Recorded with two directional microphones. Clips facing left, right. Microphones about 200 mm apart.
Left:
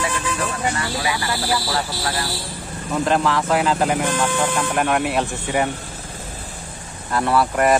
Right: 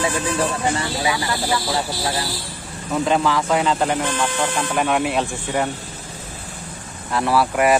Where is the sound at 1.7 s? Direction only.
20° right (ahead or behind).